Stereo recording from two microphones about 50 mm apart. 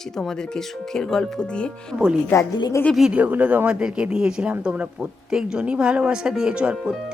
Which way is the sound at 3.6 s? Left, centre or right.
Centre.